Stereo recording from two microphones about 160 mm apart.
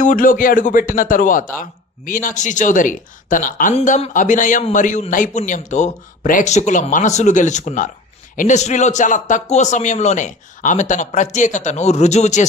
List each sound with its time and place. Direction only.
0.0 s a man's voice: 60° left (ahead or behind)